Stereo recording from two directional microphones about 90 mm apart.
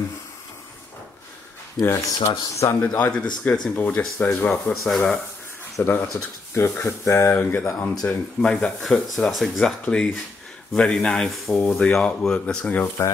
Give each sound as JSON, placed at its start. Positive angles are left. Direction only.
{"t": 1.8, "sound": "speech", "side_deg": 40}
{"t": 3.1, "sound": "speech", "side_deg": 10}
{"t": 5.8, "sound": "speech", "side_deg": 20}
{"t": 7.1, "sound": "speech", "side_deg": 30}
{"t": 7.8, "sound": "speech", "side_deg": 10}